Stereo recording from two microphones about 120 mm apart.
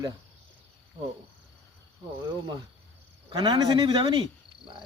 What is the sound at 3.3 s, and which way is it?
Speech, 40° right (ahead or behind).